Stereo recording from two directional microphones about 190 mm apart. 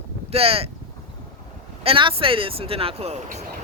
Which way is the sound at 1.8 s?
30° right (ahead or behind).